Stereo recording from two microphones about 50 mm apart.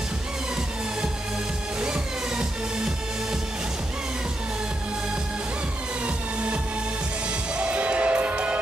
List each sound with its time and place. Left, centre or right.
1.8 s music: centre
6.0 s music: right